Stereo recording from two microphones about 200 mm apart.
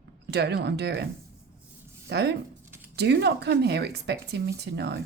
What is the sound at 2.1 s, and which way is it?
Speech, 55° right (ahead or behind).